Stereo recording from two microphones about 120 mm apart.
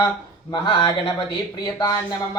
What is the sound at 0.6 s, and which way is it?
A man's voice, 40° left (ahead or behind).